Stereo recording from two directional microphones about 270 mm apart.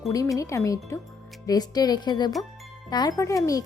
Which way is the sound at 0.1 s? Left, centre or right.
Centre.